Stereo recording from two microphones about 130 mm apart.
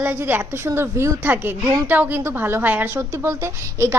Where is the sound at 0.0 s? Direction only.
15° right (ahead or behind).